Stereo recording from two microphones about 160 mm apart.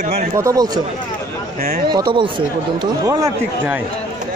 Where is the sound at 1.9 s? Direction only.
30° right (ahead or behind).